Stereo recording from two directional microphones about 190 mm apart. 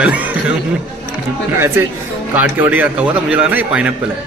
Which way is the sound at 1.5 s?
15° right (ahead or behind).